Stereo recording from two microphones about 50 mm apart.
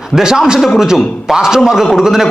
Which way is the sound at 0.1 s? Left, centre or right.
Centre.